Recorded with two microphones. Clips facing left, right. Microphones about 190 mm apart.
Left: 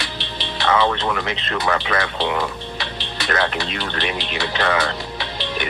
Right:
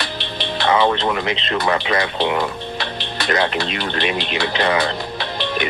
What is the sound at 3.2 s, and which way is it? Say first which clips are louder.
Speech: right 3 dB; 20° right (ahead or behind).